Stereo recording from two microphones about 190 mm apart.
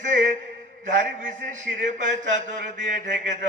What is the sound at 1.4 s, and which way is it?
Mantra, 45° right (ahead or behind).